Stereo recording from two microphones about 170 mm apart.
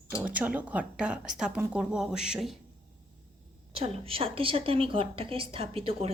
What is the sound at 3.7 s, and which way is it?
A woman's voice, 35° right (ahead or behind).